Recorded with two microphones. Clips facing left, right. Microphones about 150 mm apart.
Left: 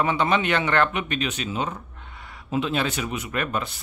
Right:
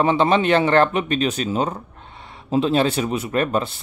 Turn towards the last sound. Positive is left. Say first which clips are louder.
# right 7 dB
turn(degrees=-35)  # may be behind; listen again after turning